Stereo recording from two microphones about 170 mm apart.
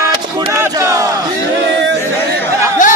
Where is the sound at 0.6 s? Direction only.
20° right (ahead or behind).